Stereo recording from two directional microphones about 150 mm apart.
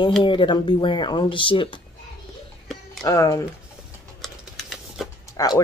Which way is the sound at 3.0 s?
25° left (ahead or behind).